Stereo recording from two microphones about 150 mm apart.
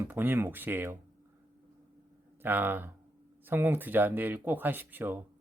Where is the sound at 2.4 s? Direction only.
15° right (ahead or behind).